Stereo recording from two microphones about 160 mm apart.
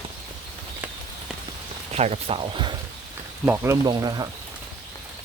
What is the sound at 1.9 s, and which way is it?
Speech, 40° right (ahead or behind).